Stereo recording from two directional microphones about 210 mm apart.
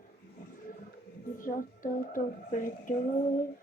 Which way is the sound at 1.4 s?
40° left (ahead or behind).